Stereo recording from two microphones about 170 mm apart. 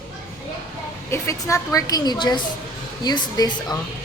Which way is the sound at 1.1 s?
15° left (ahead or behind).